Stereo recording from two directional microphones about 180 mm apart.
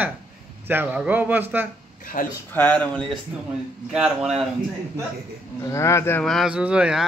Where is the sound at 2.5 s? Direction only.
10° left (ahead or behind).